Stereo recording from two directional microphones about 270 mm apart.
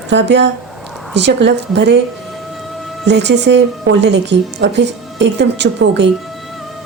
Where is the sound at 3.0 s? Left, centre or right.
Right.